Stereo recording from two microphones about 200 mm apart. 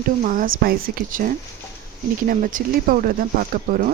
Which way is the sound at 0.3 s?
45° right (ahead or behind).